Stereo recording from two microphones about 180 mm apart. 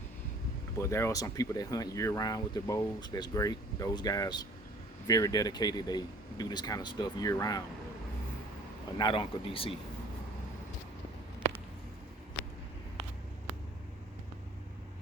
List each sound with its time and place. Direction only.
0.8 s speech: 15° left (ahead or behind)
9.0 s speech: 30° left (ahead or behind)